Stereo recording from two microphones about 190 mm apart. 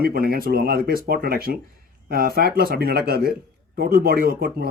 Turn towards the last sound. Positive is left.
turn(degrees=-55)  # may be behind; listen again after turning